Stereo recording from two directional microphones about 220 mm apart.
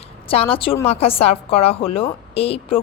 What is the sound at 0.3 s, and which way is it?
A woman's voice, 25° left (ahead or behind).